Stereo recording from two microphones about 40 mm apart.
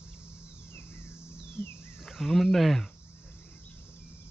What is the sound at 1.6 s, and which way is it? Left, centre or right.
Wild animals, left.